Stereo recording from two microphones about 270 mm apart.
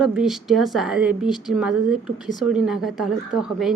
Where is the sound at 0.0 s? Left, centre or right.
Centre.